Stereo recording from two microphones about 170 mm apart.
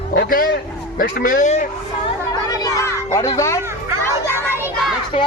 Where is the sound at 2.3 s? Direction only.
20° left (ahead or behind).